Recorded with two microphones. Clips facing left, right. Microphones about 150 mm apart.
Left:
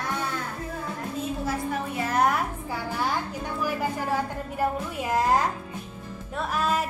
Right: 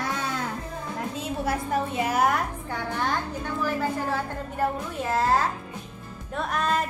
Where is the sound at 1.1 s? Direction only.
75° right (ahead or behind).